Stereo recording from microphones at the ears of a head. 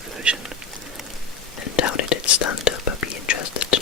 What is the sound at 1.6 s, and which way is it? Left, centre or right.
Whispering, left.